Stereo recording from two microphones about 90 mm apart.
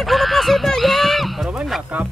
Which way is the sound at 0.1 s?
Centre (ahead or behind).